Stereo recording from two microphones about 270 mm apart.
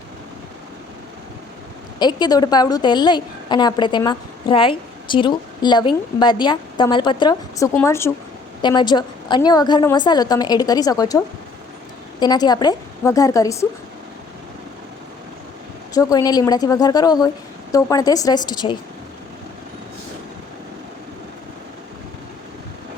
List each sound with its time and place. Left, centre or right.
2.0 s a woman's voice: centre
12.2 s a woman's voice: centre
16.0 s a woman's voice: centre